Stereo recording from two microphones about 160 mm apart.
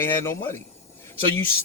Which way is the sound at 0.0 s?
15° left (ahead or behind).